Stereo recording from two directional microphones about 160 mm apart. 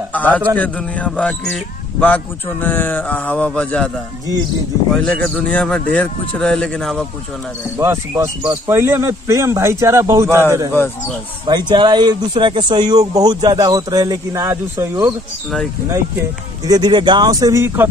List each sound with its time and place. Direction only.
0.1 s a man's voice: 10° left (ahead or behind)
4.9 s speech: 5° left (ahead or behind)
7.7 s speech: 15° right (ahead or behind)
11.4 s speech: 30° right (ahead or behind)